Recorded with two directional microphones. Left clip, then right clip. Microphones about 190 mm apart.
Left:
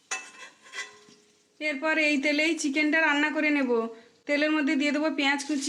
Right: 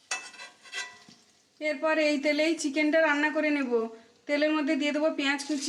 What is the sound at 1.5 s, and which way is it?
A woman's voice, 50° left (ahead or behind).